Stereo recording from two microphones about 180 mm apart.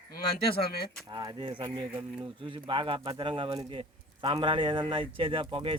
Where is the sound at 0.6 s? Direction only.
60° left (ahead or behind).